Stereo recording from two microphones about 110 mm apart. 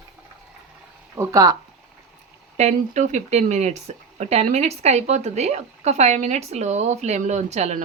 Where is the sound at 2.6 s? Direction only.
90° right.